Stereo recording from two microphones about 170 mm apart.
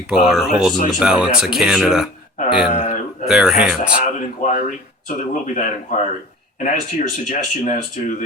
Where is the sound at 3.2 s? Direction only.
5° right (ahead or behind).